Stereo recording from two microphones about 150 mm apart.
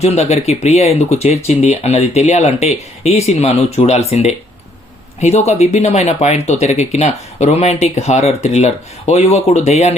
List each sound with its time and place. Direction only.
0.0 s speech: 45° left (ahead or behind)